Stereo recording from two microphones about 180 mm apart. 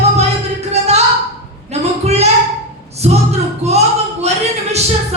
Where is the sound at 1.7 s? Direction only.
35° right (ahead or behind).